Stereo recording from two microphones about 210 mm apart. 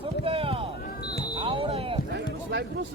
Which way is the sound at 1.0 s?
50° left (ahead or behind).